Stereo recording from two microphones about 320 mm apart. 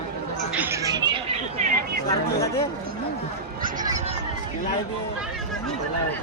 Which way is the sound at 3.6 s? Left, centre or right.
Right.